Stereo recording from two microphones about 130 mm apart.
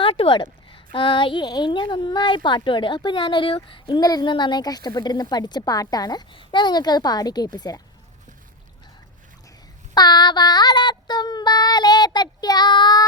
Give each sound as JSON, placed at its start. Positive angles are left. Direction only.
{"t": 0.0, "sound": "a sound", "side_deg": 45}
{"t": 0.9, "sound": "speech", "side_deg": 40}
{"t": 9.9, "sound": "child singing", "side_deg": 30}